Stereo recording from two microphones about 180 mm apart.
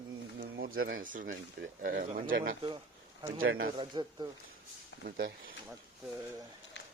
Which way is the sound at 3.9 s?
25° right (ahead or behind).